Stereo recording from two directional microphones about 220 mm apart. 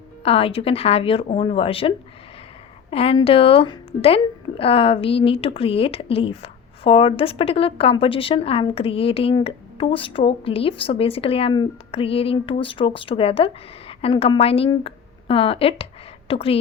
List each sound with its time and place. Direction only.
0.2 s a woman's voice: 25° left (ahead or behind)
2.9 s a woman's voice: 25° left (ahead or behind)